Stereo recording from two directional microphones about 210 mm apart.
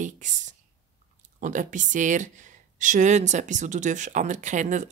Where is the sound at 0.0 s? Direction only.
35° right (ahead or behind).